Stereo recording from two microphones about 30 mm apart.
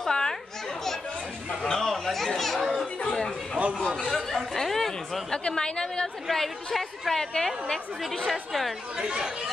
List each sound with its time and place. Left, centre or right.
0.1 s children playing: centre
1.7 s chatter: centre
3.7 s a sound: centre
5.6 s a woman's voice: left
6.3 s a woman's voice: centre
8.3 s a woman's voice: centre
8.9 s speech: right